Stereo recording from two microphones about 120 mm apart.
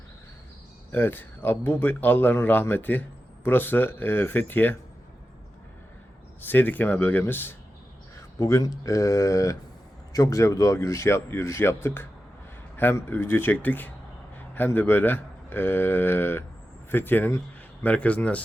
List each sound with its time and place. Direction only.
0.9 s speech: 15° left (ahead or behind)
6.4 s speech: 15° left (ahead or behind)